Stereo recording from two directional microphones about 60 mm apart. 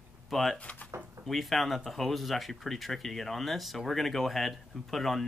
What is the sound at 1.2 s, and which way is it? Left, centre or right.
Speech, centre.